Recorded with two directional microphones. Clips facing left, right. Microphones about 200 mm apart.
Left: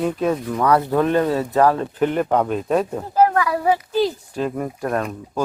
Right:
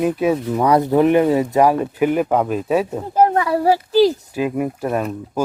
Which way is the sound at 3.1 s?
20° right (ahead or behind).